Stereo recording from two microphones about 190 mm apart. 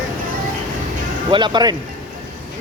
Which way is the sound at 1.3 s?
25° right (ahead or behind).